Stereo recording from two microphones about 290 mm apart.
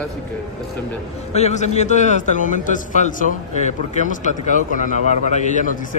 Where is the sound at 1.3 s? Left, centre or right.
Left.